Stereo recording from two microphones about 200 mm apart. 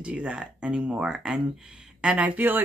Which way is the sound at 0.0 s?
5° right (ahead or behind).